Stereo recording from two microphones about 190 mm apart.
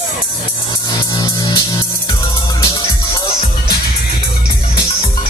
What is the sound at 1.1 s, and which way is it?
Music, 20° left (ahead or behind).